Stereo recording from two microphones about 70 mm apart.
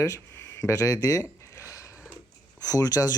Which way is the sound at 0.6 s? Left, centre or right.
Left.